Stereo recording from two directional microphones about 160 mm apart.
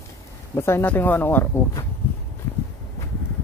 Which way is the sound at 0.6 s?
15° left (ahead or behind).